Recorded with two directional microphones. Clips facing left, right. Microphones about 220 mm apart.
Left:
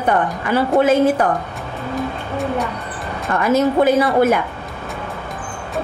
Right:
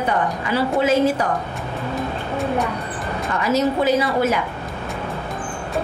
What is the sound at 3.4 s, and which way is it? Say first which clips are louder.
Speech: left 4 dB; 55° left (ahead or behind).